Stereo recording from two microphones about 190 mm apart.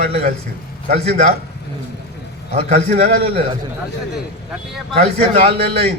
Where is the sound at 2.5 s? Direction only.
35° right (ahead or behind).